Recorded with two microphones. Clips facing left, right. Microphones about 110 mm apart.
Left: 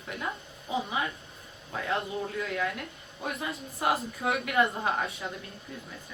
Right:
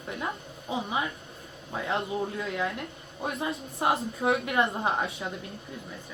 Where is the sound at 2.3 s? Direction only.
20° right (ahead or behind).